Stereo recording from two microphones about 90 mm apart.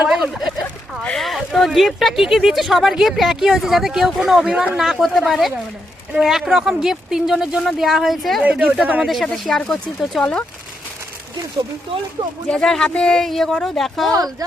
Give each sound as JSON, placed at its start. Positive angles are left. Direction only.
{"t": 0.0, "sound": "a sound", "side_deg": -10}
{"t": 1.0, "sound": "speech", "side_deg": 5}
{"t": 8.4, "sound": "speech", "side_deg": -10}
{"t": 9.0, "sound": "speech", "side_deg": 0}
{"t": 12.5, "sound": "speech", "side_deg": 10}
{"t": 14.1, "sound": "speech", "side_deg": -40}